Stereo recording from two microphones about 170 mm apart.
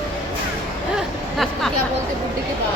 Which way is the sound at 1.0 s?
Centre (ahead or behind).